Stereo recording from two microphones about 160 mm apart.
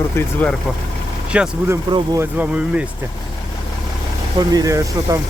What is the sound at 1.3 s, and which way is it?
Speech, 10° right (ahead or behind).